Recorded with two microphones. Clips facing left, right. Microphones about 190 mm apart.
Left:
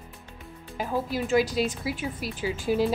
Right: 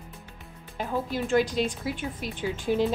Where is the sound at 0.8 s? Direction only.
5° left (ahead or behind).